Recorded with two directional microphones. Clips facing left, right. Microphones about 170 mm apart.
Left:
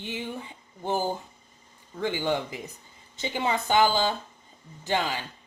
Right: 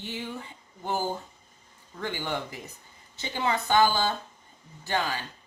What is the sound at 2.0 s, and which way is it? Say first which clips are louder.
Speech: left 5 dB; 15° left (ahead or behind).